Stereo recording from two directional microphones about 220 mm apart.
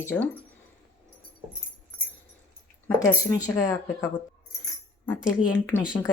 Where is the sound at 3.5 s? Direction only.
15° left (ahead or behind).